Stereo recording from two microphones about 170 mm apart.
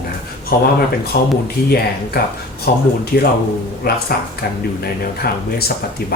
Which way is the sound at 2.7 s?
65° left (ahead or behind).